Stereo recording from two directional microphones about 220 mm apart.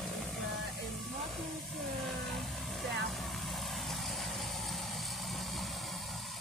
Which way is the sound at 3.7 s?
Centre (ahead or behind).